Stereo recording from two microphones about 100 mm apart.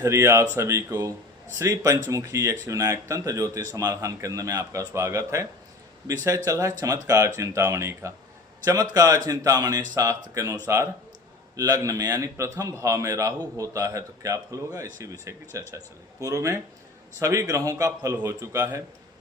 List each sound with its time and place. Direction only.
0.0 s a man's voice: 30° right (ahead or behind)